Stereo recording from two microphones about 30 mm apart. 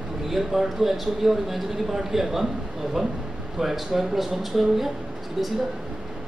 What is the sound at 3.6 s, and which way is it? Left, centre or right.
A man's voice, centre.